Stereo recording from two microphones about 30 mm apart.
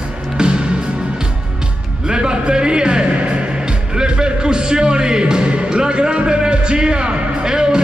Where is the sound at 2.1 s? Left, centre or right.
Right.